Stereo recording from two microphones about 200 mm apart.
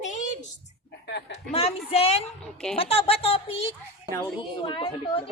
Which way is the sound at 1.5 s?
30° left (ahead or behind).